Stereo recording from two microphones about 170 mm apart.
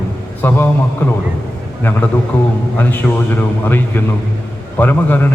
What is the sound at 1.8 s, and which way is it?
A man's voice, 15° left (ahead or behind).